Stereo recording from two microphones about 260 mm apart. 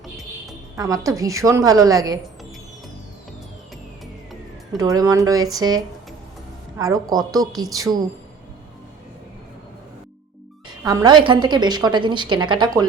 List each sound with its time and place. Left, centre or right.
0.8 s a woman's voice: centre
4.0 s music: centre
4.8 s a woman's voice: centre
10.8 s a woman's voice: centre